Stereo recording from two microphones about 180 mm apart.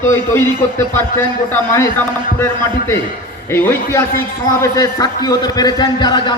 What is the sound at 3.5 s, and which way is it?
A man's voice, 15° left (ahead or behind).